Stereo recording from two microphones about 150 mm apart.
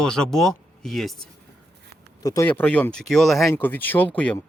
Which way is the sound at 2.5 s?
10° left (ahead or behind).